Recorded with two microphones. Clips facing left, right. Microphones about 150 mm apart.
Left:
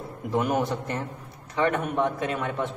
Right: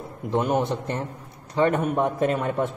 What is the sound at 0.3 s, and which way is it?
Speech, 25° right (ahead or behind).